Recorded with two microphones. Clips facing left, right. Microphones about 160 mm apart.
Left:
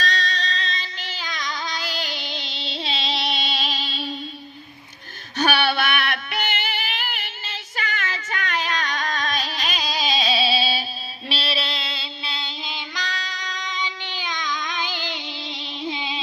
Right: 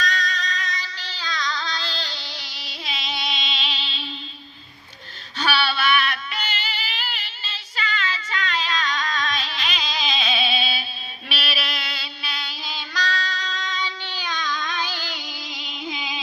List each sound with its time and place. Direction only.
0.0 s child singing: 35° left (ahead or behind)
3.5 s music: 40° left (ahead or behind)
5.4 s female singing: 50° left (ahead or behind); by 16.2 s 30° left (ahead or behind)